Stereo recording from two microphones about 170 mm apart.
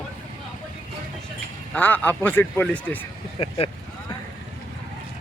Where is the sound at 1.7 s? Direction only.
10° left (ahead or behind).